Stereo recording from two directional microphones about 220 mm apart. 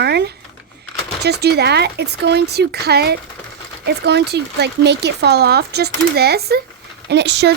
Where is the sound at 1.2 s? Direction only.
50° right (ahead or behind).